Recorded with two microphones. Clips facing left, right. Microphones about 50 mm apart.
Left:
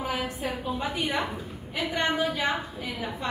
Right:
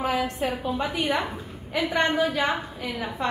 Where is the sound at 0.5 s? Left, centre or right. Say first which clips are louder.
Right 3 dB; centre.